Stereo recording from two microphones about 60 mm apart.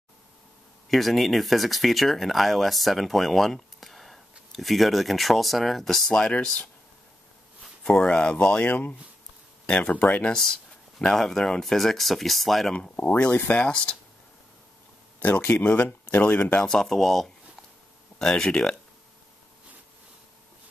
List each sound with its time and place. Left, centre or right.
0.8 s speech: centre
7.8 s speech: centre
10.3 s speech: centre
12.9 s speech: left
13.7 s speech: centre
15.1 s speech: left
16.6 s speech: centre
18.2 s speech: centre